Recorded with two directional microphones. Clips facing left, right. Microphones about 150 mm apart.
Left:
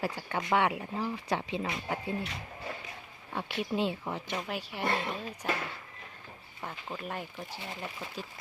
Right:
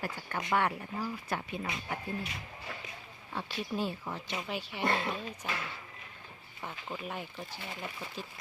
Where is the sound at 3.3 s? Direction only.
20° left (ahead or behind).